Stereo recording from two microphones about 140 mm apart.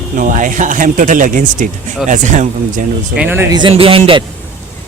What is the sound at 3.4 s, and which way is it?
Speech, 30° right (ahead or behind).